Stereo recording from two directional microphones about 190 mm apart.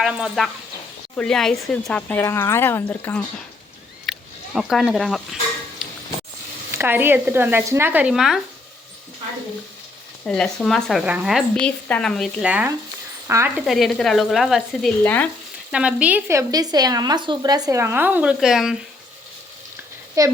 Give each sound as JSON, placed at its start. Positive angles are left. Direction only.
{"t": 0.0, "sound": "a woman's voice", "side_deg": -5}
{"t": 6.7, "sound": "speech", "side_deg": -10}
{"t": 10.2, "sound": "a woman's voice", "side_deg": 5}
{"t": 13.7, "sound": "a woman's voice", "side_deg": 0}
{"t": 15.7, "sound": "speech", "side_deg": -5}
{"t": 20.2, "sound": "speech", "side_deg": -15}